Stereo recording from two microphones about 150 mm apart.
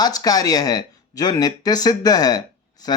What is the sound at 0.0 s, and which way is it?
Speech, 25° left (ahead or behind).